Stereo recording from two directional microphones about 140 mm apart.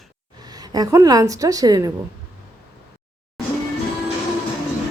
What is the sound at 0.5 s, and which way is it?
A woman's voice, 25° right (ahead or behind).